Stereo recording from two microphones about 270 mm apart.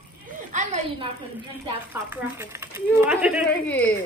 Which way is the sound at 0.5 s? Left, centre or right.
Right.